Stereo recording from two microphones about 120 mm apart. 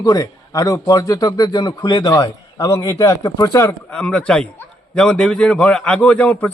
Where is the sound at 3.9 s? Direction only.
5° left (ahead or behind).